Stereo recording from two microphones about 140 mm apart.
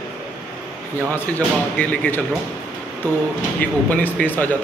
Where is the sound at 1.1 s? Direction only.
10° left (ahead or behind).